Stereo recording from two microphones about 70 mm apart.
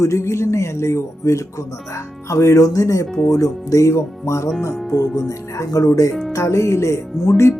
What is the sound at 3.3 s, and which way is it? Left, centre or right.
Speech, left.